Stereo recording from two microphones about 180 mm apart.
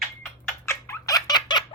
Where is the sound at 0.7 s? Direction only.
15° left (ahead or behind).